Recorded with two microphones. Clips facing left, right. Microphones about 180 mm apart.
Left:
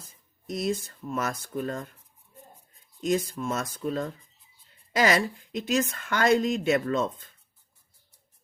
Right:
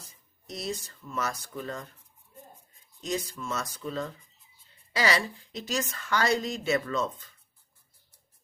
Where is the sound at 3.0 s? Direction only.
50° left (ahead or behind).